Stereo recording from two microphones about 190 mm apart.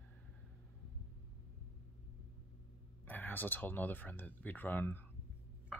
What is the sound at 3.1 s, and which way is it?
Speech, 10° left (ahead or behind).